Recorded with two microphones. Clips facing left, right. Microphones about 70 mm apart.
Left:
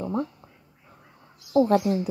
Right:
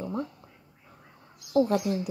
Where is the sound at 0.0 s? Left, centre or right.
Left.